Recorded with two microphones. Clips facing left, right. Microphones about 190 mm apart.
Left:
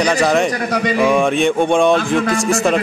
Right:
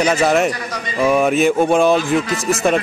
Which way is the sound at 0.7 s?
70° left (ahead or behind).